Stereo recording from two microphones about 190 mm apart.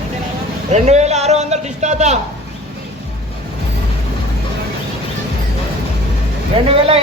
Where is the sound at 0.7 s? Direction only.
35° right (ahead or behind).